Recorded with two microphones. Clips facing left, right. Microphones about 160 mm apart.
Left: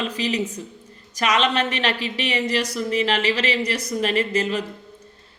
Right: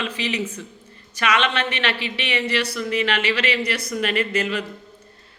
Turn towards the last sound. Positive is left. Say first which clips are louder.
# left 1 dB
turn(degrees=35)  # may be behind; listen again after turning